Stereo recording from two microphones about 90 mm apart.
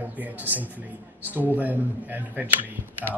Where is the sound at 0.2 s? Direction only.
20° right (ahead or behind).